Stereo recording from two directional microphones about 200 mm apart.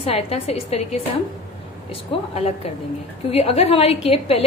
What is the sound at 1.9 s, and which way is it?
A woman's voice, 30° left (ahead or behind).